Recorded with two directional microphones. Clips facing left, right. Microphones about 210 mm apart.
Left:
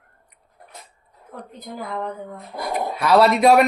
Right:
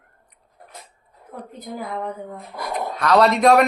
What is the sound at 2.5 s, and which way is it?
Speech, 35° left (ahead or behind).